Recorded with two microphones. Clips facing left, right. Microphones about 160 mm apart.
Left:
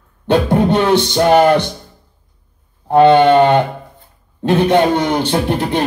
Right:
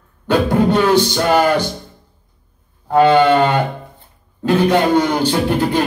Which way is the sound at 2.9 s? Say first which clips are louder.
Left 3 dB; 25° left (ahead or behind).